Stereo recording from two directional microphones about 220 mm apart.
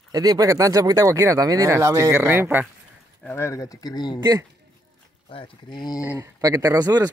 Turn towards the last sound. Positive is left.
turn(degrees=-15)  # may be behind; listen again after turning